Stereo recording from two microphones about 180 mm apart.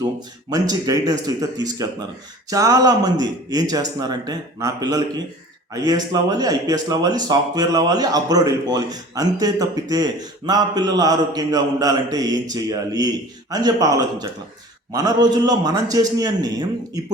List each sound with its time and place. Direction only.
0.5 s speech: 20° right (ahead or behind)